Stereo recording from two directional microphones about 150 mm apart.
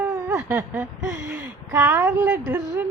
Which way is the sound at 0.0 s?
20° right (ahead or behind).